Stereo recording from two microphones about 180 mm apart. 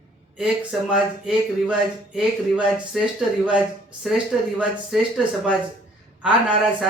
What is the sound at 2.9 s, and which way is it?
Speech, 5° right (ahead or behind).